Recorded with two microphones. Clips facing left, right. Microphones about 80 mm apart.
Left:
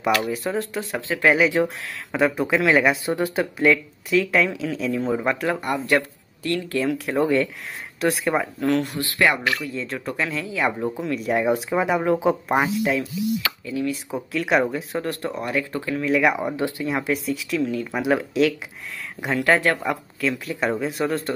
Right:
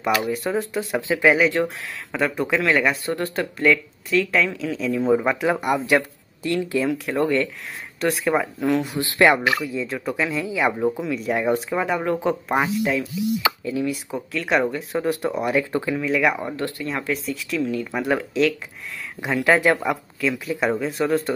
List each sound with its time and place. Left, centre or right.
0.1 s speech: centre
6.8 s speech: centre
9.0 s speech: right
9.4 s speech: centre
13.4 s a sound: centre
14.1 s speech: centre
15.0 s speech: centre
16.0 s speech: centre
16.3 s speech: centre
17.3 s speech: centre